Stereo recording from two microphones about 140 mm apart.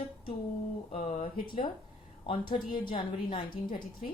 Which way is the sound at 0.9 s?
55° left (ahead or behind).